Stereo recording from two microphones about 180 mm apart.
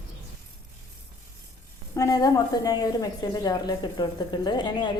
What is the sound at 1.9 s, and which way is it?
A woman's voice, 20° left (ahead or behind).